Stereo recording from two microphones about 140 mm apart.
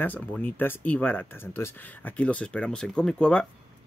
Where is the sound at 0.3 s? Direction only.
10° left (ahead or behind).